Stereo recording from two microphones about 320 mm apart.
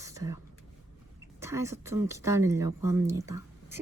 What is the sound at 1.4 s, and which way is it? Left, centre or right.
Speech, centre.